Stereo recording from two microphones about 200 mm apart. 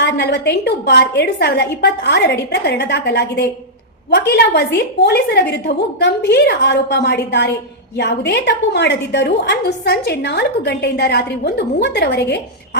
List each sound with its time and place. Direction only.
0.0 s a woman's voice: 60° left (ahead or behind)